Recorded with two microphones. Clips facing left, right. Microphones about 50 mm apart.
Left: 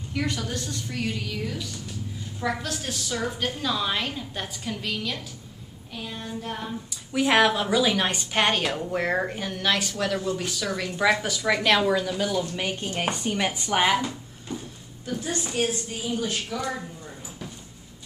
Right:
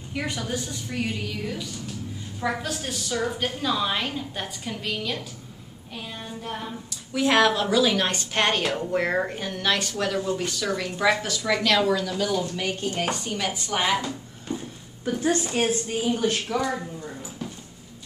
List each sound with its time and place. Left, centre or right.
0.1 s a woman's voice: centre
7.1 s a woman's voice: centre
11.1 s a woman's voice: centre
14.5 s speech: right
15.0 s a woman's voice: right